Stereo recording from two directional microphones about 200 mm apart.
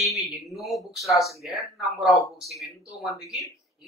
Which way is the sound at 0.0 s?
Centre (ahead or behind).